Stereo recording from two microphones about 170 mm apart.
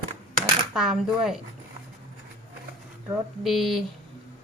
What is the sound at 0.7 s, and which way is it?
Speech, centre (ahead or behind).